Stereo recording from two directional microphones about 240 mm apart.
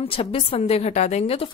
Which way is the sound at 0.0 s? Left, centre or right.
Left.